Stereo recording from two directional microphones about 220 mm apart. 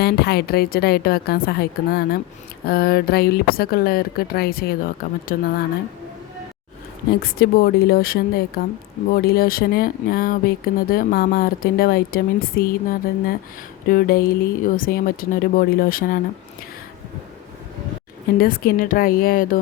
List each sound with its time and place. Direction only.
0.0 s speech: 45° left (ahead or behind)
7.2 s speech: 45° left (ahead or behind)
18.3 s speech: 40° left (ahead or behind)